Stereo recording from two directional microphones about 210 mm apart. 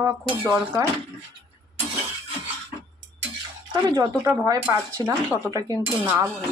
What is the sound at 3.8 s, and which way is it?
Speech, 15° right (ahead or behind).